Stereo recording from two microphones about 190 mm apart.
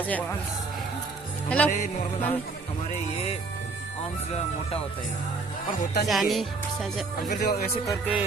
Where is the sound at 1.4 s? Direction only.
5° left (ahead or behind).